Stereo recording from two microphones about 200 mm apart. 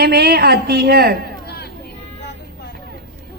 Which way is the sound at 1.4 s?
55° left (ahead or behind).